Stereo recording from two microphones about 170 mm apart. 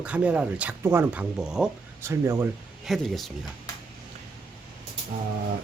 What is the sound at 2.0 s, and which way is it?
Speech, 15° right (ahead or behind).